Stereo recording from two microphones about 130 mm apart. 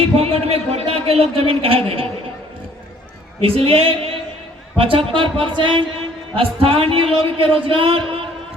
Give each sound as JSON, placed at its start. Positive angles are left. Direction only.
{"t": 0.2, "sound": "a man's voice", "side_deg": -50}
{"t": 3.4, "sound": "a man's voice", "side_deg": -45}